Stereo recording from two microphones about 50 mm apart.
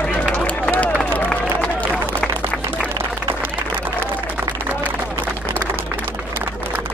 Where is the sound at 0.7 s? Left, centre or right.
Left.